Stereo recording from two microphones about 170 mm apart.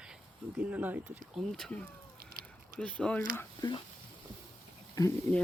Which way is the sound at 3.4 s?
25° left (ahead or behind).